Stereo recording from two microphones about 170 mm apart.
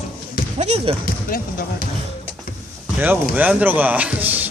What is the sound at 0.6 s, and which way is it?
Speech, 40° right (ahead or behind).